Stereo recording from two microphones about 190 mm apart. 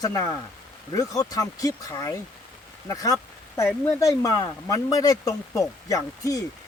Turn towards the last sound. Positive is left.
turn(degrees=20)  # may be behind; listen again after turning